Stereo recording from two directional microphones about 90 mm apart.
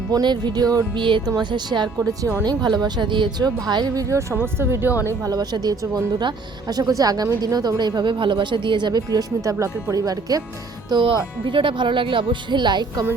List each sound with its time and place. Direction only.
0.1 s speech: 55° right (ahead or behind)
0.9 s speech: 65° right (ahead or behind); by 4.0 s 50° right (ahead or behind)
4.1 s speech: 30° right (ahead or behind)
5.0 s speech: 40° right (ahead or behind)
10.9 s speech: 65° right (ahead or behind)